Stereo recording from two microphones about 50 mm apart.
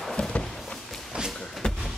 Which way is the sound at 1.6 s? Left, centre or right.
Centre.